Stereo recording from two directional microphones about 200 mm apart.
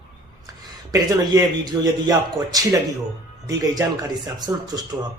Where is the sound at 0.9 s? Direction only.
20° right (ahead or behind).